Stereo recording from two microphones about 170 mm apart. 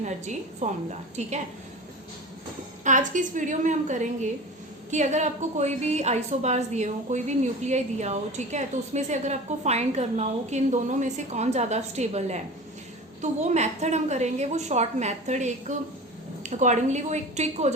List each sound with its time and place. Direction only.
0.0 s a woman's voice: 45° right (ahead or behind)
2.8 s a woman's voice: 45° right (ahead or behind)